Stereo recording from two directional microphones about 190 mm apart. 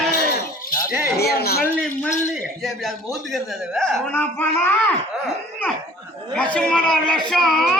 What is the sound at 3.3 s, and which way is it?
Speech, centre (ahead or behind).